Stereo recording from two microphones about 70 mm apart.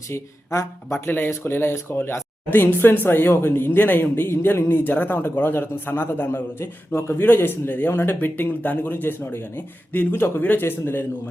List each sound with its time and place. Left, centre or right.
0.1 s speech: left
0.9 s a man's voice: left